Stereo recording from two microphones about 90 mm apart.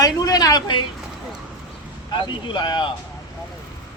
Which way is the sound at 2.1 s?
60° left (ahead or behind).